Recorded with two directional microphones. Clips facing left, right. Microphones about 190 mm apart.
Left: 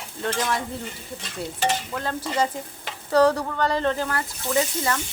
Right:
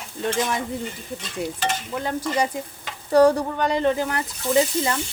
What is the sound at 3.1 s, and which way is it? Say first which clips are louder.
Speech: right 3 dB; 15° right (ahead or behind).